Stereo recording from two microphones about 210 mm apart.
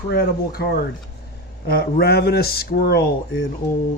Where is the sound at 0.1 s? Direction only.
50° left (ahead or behind).